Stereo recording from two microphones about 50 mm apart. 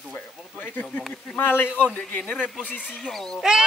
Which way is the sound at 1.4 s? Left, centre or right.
Left.